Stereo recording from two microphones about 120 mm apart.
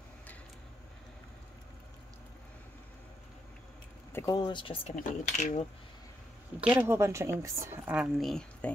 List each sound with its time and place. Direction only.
4.1 s speech: 20° left (ahead or behind)
4.4 s speech: 40° left (ahead or behind)
4.8 s speech: 75° left (ahead or behind)
6.8 s a woman's voice: 20° right (ahead or behind)
7.8 s speech: 10° right (ahead or behind)
8.2 s speech: 5° left (ahead or behind)